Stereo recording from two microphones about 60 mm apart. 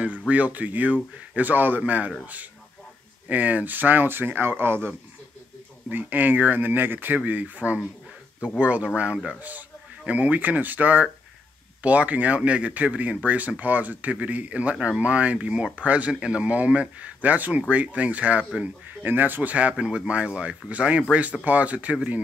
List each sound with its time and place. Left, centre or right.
0.3 s speech: right
3.3 s speech: right
9.3 s speech: right